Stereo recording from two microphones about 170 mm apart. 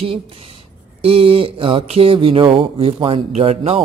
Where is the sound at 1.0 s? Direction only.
35° right (ahead or behind).